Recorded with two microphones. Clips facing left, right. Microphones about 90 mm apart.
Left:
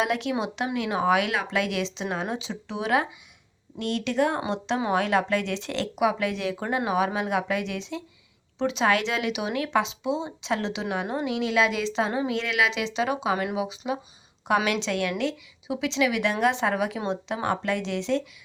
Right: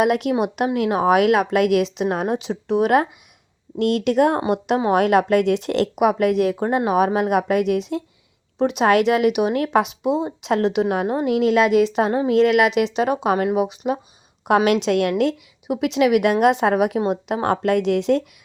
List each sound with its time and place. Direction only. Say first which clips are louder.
0.0 s speech: right 7 dB; 55° right (ahead or behind)
3.8 s speech: right 8 dB; 65° right (ahead or behind)
14.4 s speech: right 7 dB; 65° right (ahead or behind)